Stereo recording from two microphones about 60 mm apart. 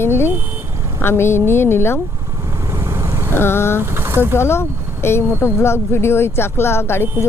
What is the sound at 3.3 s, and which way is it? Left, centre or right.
Vehicle, left.